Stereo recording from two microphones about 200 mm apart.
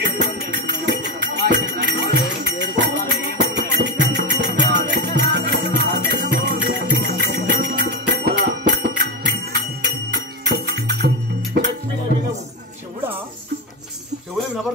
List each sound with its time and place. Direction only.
0.0 s music: 55° right (ahead or behind)